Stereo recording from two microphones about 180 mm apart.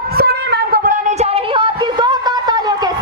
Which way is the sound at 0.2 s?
60° right (ahead or behind).